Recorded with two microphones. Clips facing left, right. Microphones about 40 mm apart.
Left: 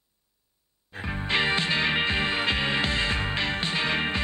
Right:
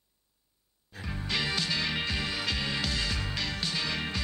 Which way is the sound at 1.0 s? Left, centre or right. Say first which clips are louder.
Left 7 dB; left.